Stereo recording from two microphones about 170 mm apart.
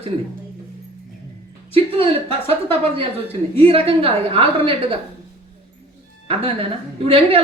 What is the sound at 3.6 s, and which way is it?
A woman's voice, 35° right (ahead or behind).